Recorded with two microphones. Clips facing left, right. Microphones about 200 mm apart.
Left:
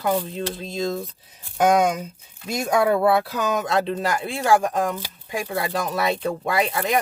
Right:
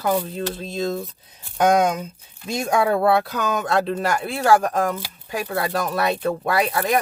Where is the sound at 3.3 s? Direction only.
20° left (ahead or behind).